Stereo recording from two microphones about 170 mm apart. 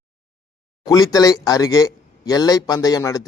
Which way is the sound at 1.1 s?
20° left (ahead or behind).